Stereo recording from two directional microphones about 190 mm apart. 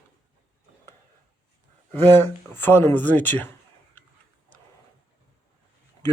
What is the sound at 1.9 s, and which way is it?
Speech, 10° left (ahead or behind).